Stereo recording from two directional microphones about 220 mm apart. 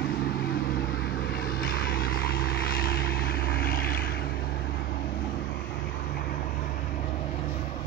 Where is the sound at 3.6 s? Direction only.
40° left (ahead or behind).